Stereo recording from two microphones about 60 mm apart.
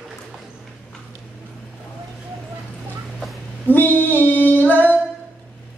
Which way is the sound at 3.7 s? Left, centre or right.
Left.